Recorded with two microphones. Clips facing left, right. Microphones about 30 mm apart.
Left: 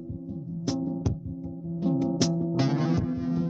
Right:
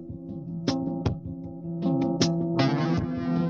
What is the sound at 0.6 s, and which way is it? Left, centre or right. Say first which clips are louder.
Music: right 2 dB; right.